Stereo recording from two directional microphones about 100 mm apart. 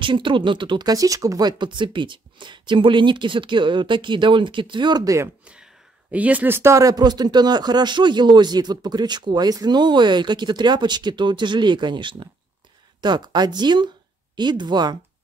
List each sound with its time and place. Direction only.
0.0 s speech: 55° right (ahead or behind); by 1.5 s 35° right (ahead or behind)
1.6 s speech: 55° right (ahead or behind); by 5.3 s 35° right (ahead or behind)
6.1 s speech: 15° right (ahead or behind); by 15.0 s 45° right (ahead or behind)